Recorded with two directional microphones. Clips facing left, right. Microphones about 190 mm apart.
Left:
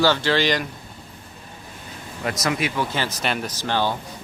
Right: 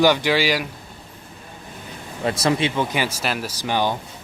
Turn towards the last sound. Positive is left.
turn(degrees=-15)  # may be behind; listen again after turning